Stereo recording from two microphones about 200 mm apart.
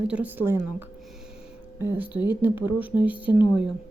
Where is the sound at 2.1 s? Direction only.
20° left (ahead or behind).